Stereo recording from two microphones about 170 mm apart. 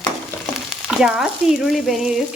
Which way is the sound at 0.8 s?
5° right (ahead or behind).